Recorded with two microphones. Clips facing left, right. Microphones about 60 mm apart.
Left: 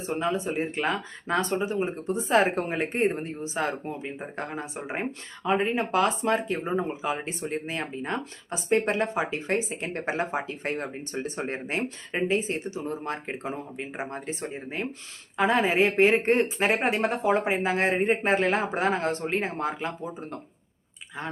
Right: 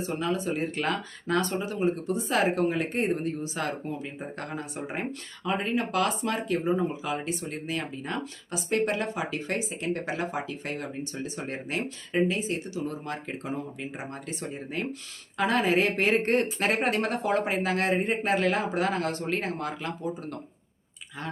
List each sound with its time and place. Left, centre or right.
0.0 s speech: left